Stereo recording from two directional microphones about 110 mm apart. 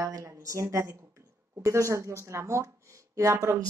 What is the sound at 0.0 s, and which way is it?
A woman's voice, 25° right (ahead or behind).